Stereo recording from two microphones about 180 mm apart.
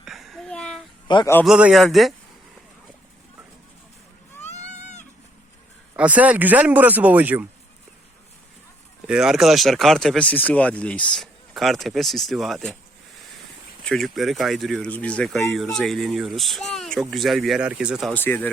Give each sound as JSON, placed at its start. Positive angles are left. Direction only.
{"t": 0.0, "sound": "a sound", "side_deg": 0}
{"t": 1.0, "sound": "a man's voice", "side_deg": 25}
{"t": 1.5, "sound": "speech", "side_deg": -5}
{"t": 4.4, "sound": "a sound", "side_deg": 40}
{"t": 6.0, "sound": "speech", "side_deg": -10}
{"t": 9.0, "sound": "speech", "side_deg": -5}
{"t": 13.8, "sound": "speech", "side_deg": 0}
{"t": 18.1, "sound": "speech", "side_deg": 10}